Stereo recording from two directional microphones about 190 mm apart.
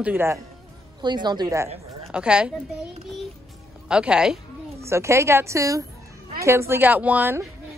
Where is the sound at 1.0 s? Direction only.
25° right (ahead or behind).